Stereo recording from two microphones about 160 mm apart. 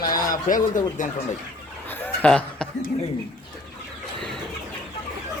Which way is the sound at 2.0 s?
10° left (ahead or behind).